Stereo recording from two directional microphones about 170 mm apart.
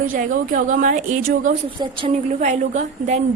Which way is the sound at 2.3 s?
45° right (ahead or behind).